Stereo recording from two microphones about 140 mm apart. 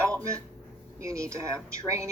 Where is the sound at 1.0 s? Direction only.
20° right (ahead or behind).